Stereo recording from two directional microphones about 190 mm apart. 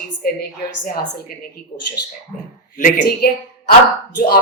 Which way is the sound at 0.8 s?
45° left (ahead or behind).